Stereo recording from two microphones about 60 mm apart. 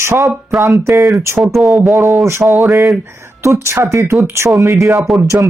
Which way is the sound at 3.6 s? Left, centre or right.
Right.